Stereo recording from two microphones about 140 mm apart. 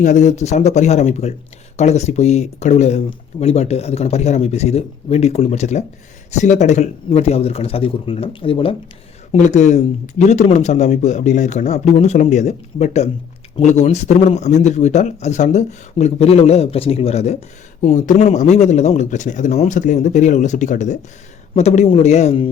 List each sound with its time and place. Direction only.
0.0 s a man's voice: 60° left (ahead or behind); by 8.7 s 40° left (ahead or behind)
9.3 s a man's voice: 60° left (ahead or behind)
11.9 s speech: 50° left (ahead or behind)
17.7 s a man's voice: 60° left (ahead or behind)